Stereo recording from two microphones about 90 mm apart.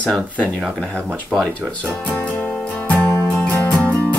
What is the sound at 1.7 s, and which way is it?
Music, 15° left (ahead or behind).